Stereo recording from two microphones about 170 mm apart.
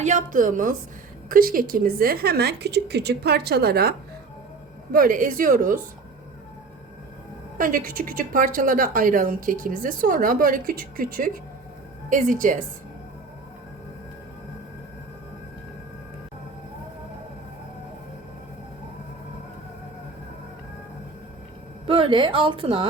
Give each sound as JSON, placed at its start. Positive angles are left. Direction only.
{"t": 0.0, "sound": "a woman's voice", "side_deg": -45}
{"t": 4.9, "sound": "a woman's voice", "side_deg": -55}
{"t": 7.6, "sound": "a woman's voice", "side_deg": -55}
{"t": 21.8, "sound": "a woman's voice", "side_deg": -35}